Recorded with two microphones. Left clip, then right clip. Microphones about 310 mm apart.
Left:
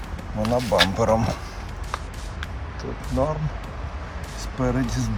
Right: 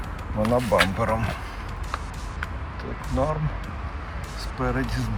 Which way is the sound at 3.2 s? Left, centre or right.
Centre.